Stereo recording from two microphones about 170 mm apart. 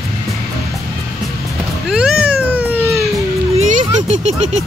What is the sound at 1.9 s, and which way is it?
Cat, 5° right (ahead or behind).